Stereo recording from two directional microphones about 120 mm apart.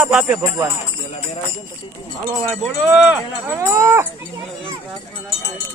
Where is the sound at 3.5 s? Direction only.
25° right (ahead or behind).